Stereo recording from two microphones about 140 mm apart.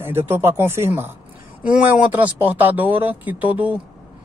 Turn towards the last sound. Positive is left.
turn(degrees=-10)  # may be behind; listen again after turning